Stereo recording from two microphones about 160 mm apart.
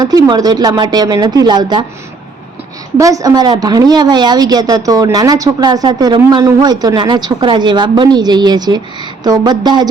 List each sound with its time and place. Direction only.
0.0 s a woman's voice: 25° right (ahead or behind)
3.0 s a woman's voice: 20° right (ahead or behind)